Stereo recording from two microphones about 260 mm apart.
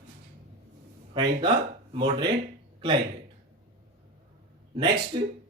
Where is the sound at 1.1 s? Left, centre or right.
Centre.